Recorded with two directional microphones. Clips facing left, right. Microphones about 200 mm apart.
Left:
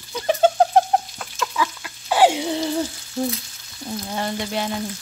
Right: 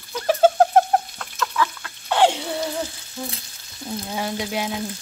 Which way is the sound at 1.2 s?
10° left (ahead or behind).